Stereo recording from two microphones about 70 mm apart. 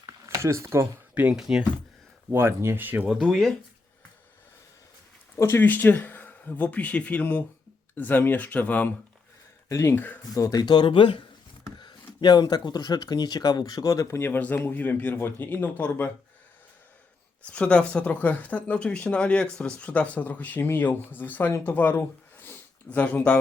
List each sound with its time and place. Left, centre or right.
0.0 s a sound: right
1.1 s speech: right
1.4 s speech: centre
2.3 s speech: right
2.7 s speech: right
3.1 s speech: centre
5.4 s speech: left
9.6 s speech: left
9.9 s speech: left
10.3 s speech: left
10.6 s speech: left
14.2 s speech: left
17.5 s speech: centre
22.9 s speech: left